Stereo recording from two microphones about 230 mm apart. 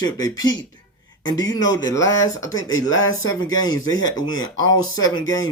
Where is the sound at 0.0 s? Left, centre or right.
Centre.